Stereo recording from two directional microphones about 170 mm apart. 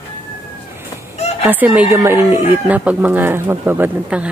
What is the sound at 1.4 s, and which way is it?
Speech, 10° right (ahead or behind).